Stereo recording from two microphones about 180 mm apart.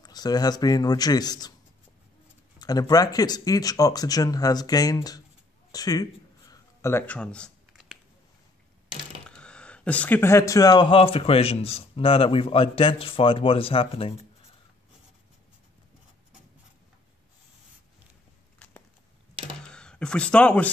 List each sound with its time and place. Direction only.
0.0 s speech: 20° left (ahead or behind)
2.6 s speech: 20° left (ahead or behind)
6.5 s a sound: 15° left (ahead or behind)
9.2 s speech: 5° left (ahead or behind); by 14.2 s 30° left (ahead or behind)
19.7 s speech: 5° left (ahead or behind)